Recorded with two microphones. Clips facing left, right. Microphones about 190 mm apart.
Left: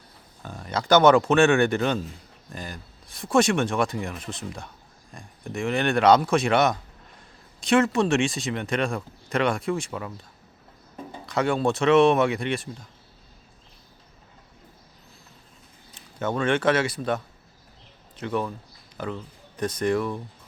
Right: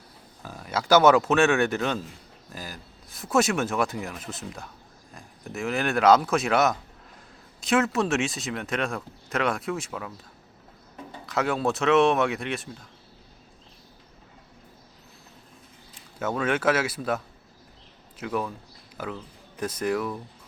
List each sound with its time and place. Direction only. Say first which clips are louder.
0.4 s speech: left 1 dB; 5° right (ahead or behind)
11.3 s speech: left 2 dB; 5° right (ahead or behind)
16.1 s speech: left 2 dB; 5° right (ahead or behind)
18.2 s speech: left 2 dB; 5° right (ahead or behind)